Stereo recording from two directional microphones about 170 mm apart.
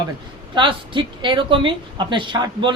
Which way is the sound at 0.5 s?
30° right (ahead or behind).